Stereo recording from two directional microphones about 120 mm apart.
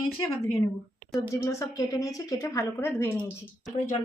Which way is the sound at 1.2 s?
25° left (ahead or behind).